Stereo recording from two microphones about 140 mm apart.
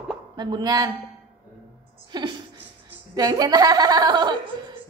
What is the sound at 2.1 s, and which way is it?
Music, 30° right (ahead or behind).